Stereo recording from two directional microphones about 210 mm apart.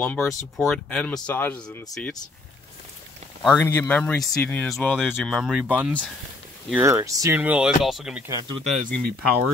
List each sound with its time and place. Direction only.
0.0 s speech: centre (ahead or behind)
3.4 s speech: 10° left (ahead or behind)
8.3 s speech: 15° right (ahead or behind)
8.6 s speech: 40° right (ahead or behind)